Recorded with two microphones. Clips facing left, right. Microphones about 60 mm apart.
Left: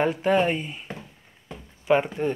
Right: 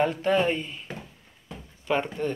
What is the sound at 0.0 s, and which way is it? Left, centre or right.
Speech, centre.